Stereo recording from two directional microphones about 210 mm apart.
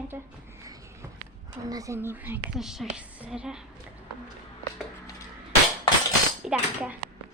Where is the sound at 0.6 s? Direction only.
15° right (ahead or behind).